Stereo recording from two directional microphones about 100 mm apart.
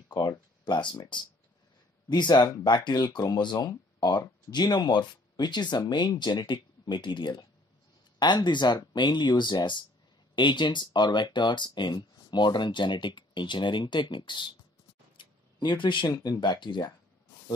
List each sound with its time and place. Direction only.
0.7 s speech: 50° left (ahead or behind)
2.0 s speech: 45° left (ahead or behind)
2.3 s speech: 35° left (ahead or behind)
2.6 s speech: 45° left (ahead or behind)
15.1 s a sound: 55° left (ahead or behind)
16.1 s speech: 45° left (ahead or behind)